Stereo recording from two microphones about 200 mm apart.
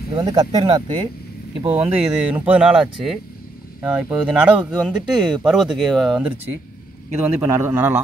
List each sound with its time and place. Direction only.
0.1 s speech: 20° right (ahead or behind)
1.8 s speech: 10° right (ahead or behind)
7.3 s speech: 10° right (ahead or behind)